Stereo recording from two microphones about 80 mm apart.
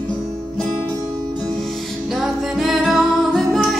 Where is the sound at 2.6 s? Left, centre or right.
Centre.